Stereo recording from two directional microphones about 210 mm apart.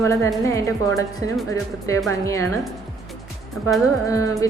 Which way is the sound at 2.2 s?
15° left (ahead or behind).